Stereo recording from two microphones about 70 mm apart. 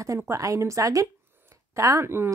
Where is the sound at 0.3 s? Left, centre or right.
Right.